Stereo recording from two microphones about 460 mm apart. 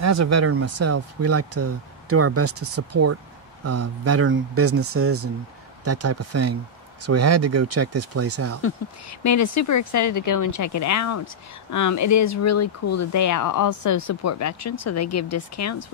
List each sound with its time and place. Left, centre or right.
0.0 s speech: right
9.2 s speech: left